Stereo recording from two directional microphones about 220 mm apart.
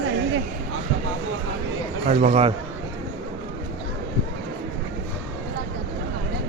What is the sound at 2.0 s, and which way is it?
Speech, 30° right (ahead or behind).